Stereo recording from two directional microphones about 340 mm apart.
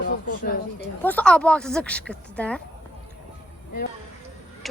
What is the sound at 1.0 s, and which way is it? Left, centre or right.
A woman's voice, centre.